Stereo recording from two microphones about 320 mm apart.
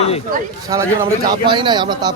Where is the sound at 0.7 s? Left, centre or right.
Centre.